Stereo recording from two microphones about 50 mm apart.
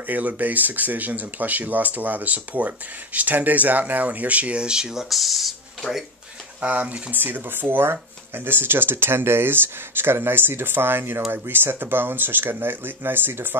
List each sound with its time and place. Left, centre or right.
0.0 s speech: right; by 5.9 s centre
6.6 s speech: right
7.2 s speech: right